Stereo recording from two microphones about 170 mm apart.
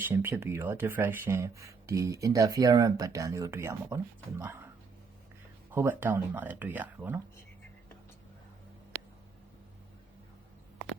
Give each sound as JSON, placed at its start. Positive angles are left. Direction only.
{"t": 0.0, "sound": "speech", "side_deg": -10}
{"t": 5.7, "sound": "speech", "side_deg": -15}